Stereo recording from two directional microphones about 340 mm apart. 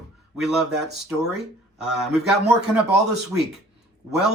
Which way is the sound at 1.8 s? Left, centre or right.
Centre.